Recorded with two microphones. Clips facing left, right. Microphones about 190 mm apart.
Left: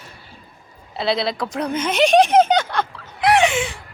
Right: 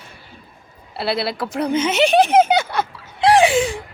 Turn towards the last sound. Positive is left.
turn(degrees=-35)  # may be behind; listen again after turning